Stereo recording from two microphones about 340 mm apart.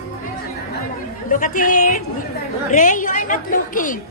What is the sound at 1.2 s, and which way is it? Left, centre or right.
A woman's voice, left.